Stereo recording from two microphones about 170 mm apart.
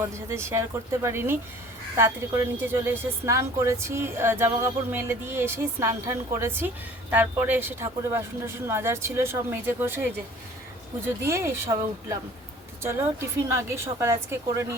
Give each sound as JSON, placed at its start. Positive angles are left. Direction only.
{"t": 0.1, "sound": "a woman's voice", "side_deg": -15}
{"t": 11.2, "sound": "a woman's voice", "side_deg": -15}